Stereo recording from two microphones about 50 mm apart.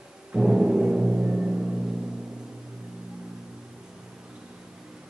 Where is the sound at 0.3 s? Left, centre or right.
Centre.